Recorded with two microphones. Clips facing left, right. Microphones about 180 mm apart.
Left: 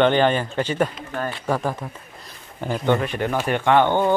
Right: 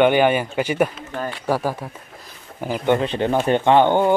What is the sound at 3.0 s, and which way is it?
Speech, 20° right (ahead or behind).